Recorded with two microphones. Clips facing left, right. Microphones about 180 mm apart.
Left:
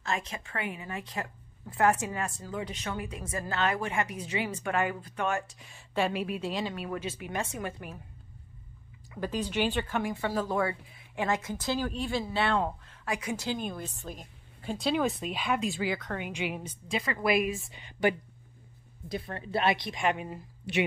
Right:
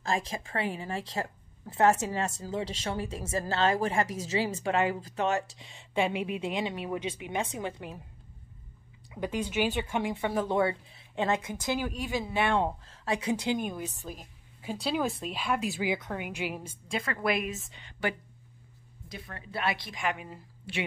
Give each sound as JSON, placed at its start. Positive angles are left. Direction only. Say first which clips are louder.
{"t": 0.0, "sound": "speech", "louder": "right 3 dB", "side_deg": -30}
{"t": 9.1, "sound": "speech", "louder": "even", "side_deg": -15}
{"t": 13.0, "sound": "speech", "louder": "right 4 dB", "side_deg": -30}
{"t": 13.4, "sound": "a woman's voice", "louder": "right 3 dB", "side_deg": -15}
{"t": 19.0, "sound": "a woman's voice", "louder": "left 8 dB", "side_deg": 30}